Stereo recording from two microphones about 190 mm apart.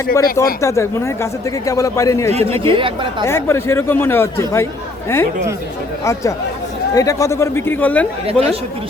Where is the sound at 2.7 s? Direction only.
25° right (ahead or behind).